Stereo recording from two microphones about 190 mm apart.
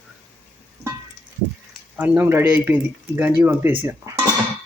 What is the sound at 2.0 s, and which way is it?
Speech, 10° right (ahead or behind).